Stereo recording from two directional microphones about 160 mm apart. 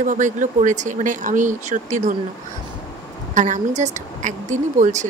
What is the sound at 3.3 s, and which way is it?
Speech, 50° right (ahead or behind).